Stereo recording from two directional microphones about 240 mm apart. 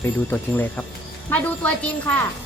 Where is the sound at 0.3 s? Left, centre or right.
Centre.